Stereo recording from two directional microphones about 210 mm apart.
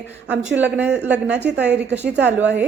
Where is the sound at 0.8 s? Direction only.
55° right (ahead or behind).